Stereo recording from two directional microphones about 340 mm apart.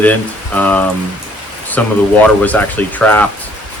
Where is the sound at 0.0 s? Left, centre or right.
Centre.